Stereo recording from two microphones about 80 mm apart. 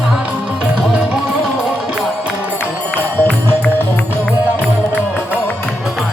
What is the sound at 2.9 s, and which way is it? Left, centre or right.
Music, centre.